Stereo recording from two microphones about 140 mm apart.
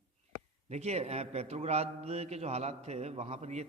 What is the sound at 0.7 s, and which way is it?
A man's voice, 50° right (ahead or behind).